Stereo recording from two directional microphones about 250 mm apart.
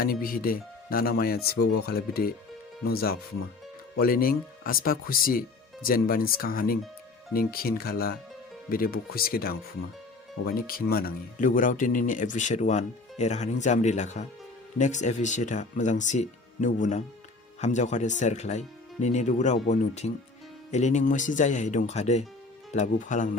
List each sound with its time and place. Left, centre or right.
0.0 s speech: left